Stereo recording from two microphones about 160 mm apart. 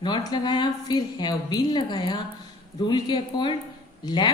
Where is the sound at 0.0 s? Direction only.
25° left (ahead or behind).